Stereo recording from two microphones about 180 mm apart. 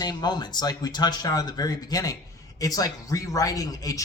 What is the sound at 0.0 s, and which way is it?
Speech, 20° left (ahead or behind).